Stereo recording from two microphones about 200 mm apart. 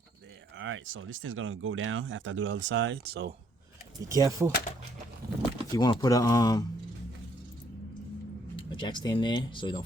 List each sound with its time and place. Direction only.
0.6 s speech: 80° right; by 3.3 s 55° right (ahead or behind)
4.1 s speech: 15° right (ahead or behind)
5.7 s speech: 20° left (ahead or behind)
8.5 s speech: 25° left (ahead or behind)